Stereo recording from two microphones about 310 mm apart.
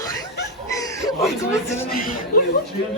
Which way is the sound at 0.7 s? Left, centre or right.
Centre.